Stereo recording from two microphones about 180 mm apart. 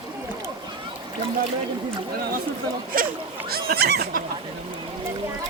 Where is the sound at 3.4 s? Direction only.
60° right (ahead or behind).